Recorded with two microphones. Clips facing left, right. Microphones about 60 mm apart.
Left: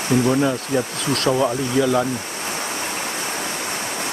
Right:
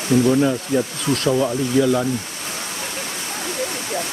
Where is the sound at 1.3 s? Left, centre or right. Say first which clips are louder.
Left 1 dB; centre.